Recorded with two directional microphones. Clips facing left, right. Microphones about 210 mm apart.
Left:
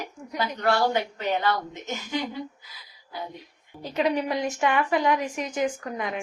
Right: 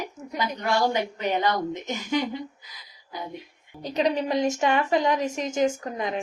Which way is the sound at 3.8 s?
20° right (ahead or behind).